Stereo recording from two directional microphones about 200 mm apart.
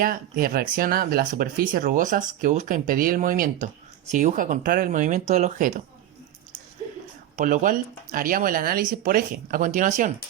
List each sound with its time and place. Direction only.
0.0 s speech: 45° right (ahead or behind)
7.3 s speech: 40° right (ahead or behind)